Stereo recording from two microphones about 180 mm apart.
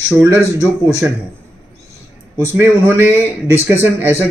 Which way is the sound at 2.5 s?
10° right (ahead or behind).